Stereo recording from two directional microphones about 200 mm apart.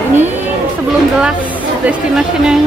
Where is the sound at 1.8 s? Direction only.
5° right (ahead or behind).